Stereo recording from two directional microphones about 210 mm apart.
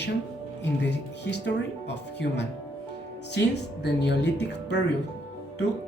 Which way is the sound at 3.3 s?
55° left (ahead or behind).